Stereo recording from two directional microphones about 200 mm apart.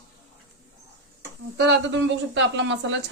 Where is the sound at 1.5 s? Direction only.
60° right (ahead or behind).